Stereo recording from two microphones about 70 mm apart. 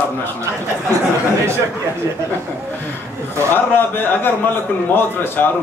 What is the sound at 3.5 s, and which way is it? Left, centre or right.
A man's voice, left.